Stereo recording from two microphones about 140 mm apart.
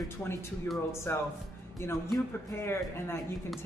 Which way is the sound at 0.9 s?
20° left (ahead or behind).